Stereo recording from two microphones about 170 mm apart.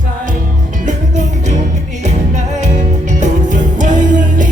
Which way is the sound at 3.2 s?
50° right (ahead or behind).